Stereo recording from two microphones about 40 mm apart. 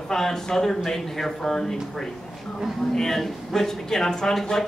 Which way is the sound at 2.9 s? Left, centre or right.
Centre.